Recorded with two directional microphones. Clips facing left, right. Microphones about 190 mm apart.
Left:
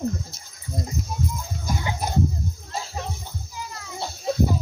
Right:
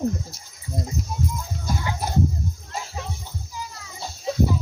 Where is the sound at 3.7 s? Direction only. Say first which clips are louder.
Left 4 dB; 60° left (ahead or behind).